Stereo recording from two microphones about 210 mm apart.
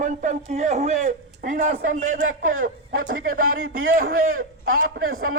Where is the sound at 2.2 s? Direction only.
70° right (ahead or behind).